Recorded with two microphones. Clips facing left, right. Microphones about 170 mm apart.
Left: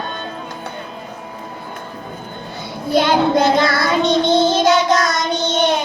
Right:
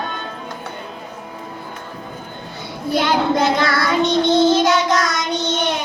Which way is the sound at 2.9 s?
30° left (ahead or behind).